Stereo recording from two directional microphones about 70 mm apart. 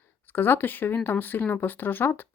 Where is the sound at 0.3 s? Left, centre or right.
Left.